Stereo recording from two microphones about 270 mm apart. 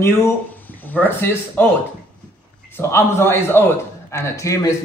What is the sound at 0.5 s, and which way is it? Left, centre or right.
Speech, centre.